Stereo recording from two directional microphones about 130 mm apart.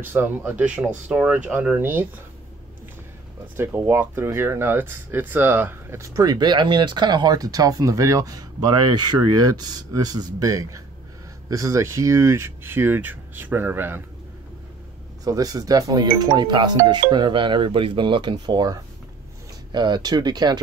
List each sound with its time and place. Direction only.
0.1 s speech: 15° right (ahead or behind)
3.5 s speech: 15° right (ahead or behind)
15.2 s speech: 30° right (ahead or behind)